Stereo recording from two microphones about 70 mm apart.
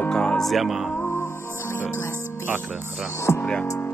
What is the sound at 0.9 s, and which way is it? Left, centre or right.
Music, left.